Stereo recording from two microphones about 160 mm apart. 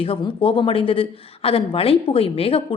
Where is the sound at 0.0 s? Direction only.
35° left (ahead or behind).